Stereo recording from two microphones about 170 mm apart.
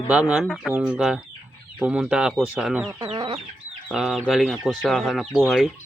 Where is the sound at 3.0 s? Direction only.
30° right (ahead or behind).